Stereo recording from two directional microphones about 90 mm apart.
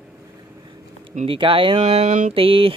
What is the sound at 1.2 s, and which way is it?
Speech, 80° right.